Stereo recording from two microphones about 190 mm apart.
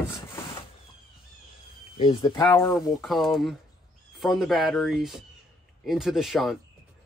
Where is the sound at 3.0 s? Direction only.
Centre (ahead or behind).